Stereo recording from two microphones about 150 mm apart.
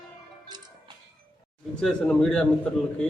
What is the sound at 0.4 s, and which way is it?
Music, 30° right (ahead or behind).